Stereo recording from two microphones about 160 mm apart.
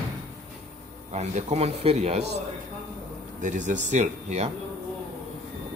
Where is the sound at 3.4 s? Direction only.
50° right (ahead or behind).